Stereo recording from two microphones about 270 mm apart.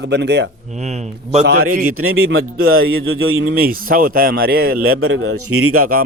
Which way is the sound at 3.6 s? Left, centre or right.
Right.